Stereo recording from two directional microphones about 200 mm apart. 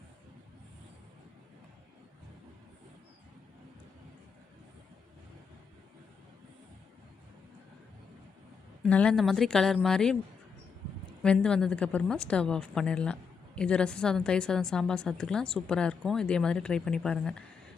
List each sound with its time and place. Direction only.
8.8 s a woman's voice: 5° left (ahead or behind)
11.2 s a woman's voice: 5° left (ahead or behind)